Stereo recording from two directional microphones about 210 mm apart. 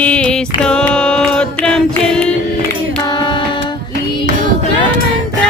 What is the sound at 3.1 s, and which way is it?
Music, 20° left (ahead or behind).